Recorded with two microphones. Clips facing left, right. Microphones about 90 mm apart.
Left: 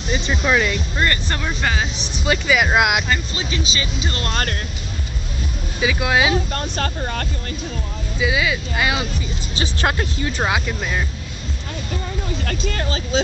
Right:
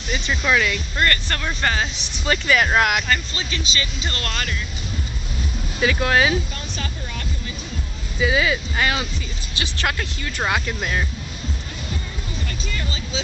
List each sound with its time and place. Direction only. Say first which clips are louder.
0.1 s speech: left 2 dB; 20° left (ahead or behind)
5.8 s speech: even; 10° left (ahead or behind)
6.3 s speech: left 4 dB; 55° left (ahead or behind)
8.2 s speech: right 1 dB; 5° left (ahead or behind)
9.6 s speech: left 4 dB; 30° left (ahead or behind)
12.4 s speech: left 6 dB; 60° left (ahead or behind)